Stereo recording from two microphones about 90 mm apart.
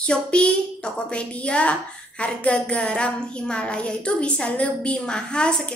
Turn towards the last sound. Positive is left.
turn(degrees=10)  # may be behind; listen again after turning